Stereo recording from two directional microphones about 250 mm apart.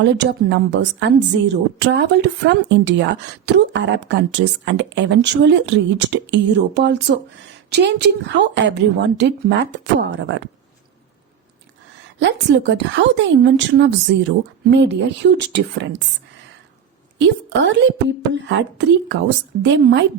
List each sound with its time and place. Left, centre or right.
0.0 s a woman's voice: right
12.2 s a woman's voice: right
17.2 s a woman's voice: right